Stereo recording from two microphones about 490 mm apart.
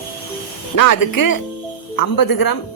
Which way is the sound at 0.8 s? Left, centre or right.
Left.